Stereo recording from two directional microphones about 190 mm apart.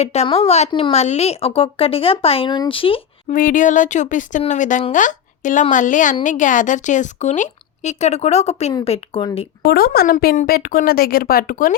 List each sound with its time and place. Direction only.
0.0 s speech: 35° left (ahead or behind)
3.3 s speech: 45° left (ahead or behind)
9.6 s a woman's voice: 55° left (ahead or behind)